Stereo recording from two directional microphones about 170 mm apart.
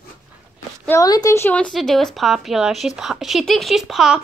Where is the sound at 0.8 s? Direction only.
20° left (ahead or behind).